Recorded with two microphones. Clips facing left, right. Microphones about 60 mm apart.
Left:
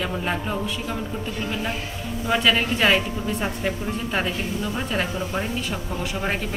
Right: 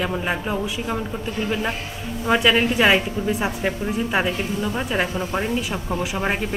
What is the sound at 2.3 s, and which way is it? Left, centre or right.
A woman's voice, centre.